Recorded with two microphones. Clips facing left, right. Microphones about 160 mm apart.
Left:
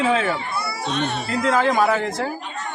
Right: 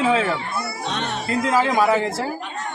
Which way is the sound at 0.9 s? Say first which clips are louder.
Left 4 dB; 90° right.